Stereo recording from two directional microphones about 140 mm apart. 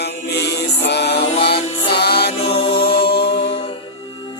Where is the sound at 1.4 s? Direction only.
45° left (ahead or behind).